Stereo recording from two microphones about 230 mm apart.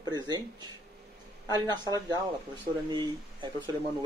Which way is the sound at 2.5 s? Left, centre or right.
Centre.